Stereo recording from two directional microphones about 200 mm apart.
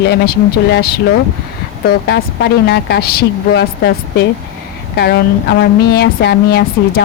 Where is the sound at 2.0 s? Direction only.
55° left (ahead or behind).